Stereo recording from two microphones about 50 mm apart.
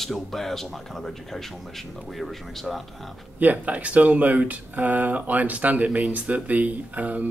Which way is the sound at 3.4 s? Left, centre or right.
Right.